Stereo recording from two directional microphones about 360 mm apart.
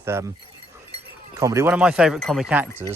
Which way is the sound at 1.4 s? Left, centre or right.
Centre.